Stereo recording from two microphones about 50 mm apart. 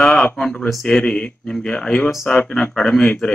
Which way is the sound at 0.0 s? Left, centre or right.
Centre.